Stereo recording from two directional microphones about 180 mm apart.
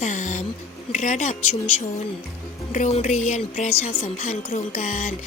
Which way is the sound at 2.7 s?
40° left (ahead or behind).